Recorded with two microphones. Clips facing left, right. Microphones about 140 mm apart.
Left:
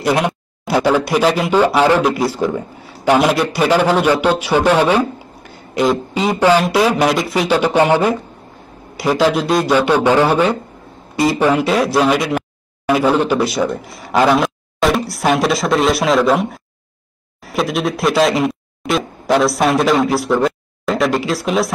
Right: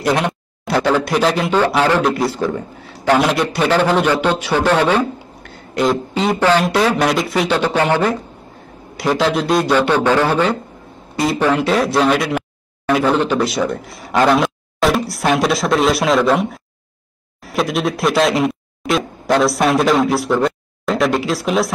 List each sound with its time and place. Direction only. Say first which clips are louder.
0.0 s a woman's voice: left 1 dB; 5° left (ahead or behind)
9.8 s a woman's voice: left 2 dB; 10° left (ahead or behind)